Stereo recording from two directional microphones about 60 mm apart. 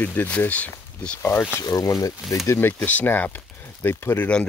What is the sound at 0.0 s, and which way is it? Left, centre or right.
Speech, left.